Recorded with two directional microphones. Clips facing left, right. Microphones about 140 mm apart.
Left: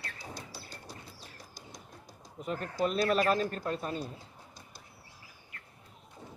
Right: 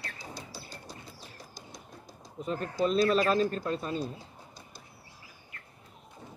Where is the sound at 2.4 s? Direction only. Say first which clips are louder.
Right 2 dB; 30° right (ahead or behind).